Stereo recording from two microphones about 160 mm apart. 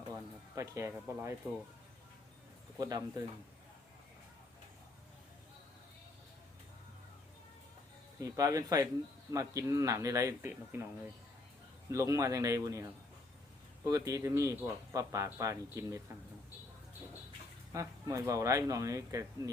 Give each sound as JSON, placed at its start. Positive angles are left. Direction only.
{"t": 0.1, "sound": "speech", "side_deg": -20}
{"t": 2.7, "sound": "speech", "side_deg": -25}
{"t": 8.2, "sound": "speech", "side_deg": -20}
{"t": 11.9, "sound": "speech", "side_deg": -20}
{"t": 17.7, "sound": "speech", "side_deg": -20}